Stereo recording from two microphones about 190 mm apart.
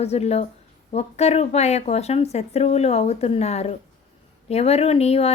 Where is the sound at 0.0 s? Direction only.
35° left (ahead or behind).